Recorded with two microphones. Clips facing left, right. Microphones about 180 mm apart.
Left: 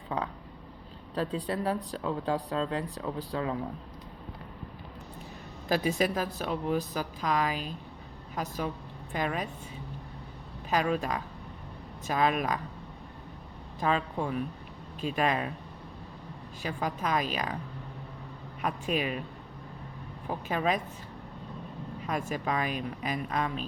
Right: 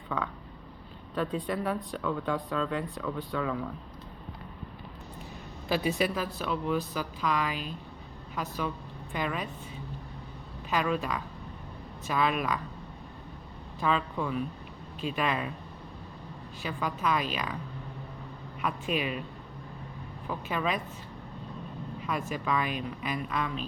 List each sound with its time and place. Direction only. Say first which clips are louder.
1.1 s speech: even; 35° left (ahead or behind)
5.6 s speech: left 1 dB; 40° left (ahead or behind)
10.7 s speech: left 1 dB; 40° left (ahead or behind)
13.7 s speech: even; 45° left (ahead or behind)
16.6 s speech: right 1 dB; 40° left (ahead or behind)
18.6 s speech: left 1 dB; 40° left (ahead or behind)
20.2 s speech: left 2 dB; 40° left (ahead or behind)
22.0 s speech: left 1 dB; 40° left (ahead or behind)